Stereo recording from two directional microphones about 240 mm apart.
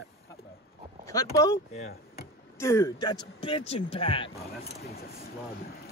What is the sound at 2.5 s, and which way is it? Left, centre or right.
A man's voice, centre.